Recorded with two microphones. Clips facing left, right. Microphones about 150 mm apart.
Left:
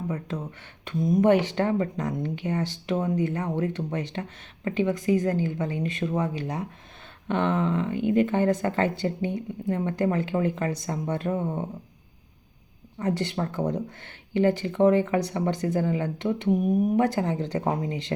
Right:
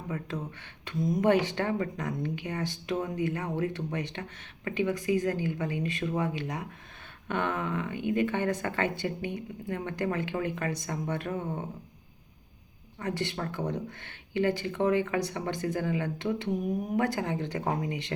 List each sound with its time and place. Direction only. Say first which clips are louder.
0.9 s speech: left 5 dB; 25° left (ahead or behind)
13.4 s speech: left 5 dB; 35° left (ahead or behind)
17.2 s speech: left 4 dB; 35° left (ahead or behind)